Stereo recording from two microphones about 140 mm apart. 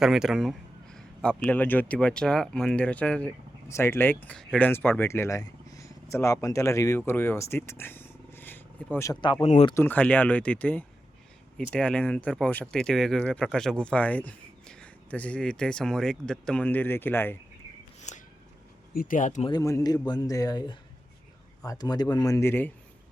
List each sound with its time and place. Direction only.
0.0 s speech: 5° right (ahead or behind); by 9.1 s 15° left (ahead or behind)
9.4 s speech: 50° left (ahead or behind)
9.7 s speech: 15° left (ahead or behind)
18.1 s a sound: 55° left (ahead or behind)
18.9 s speech: 75° left (ahead or behind)
19.5 s speech: 25° left (ahead or behind)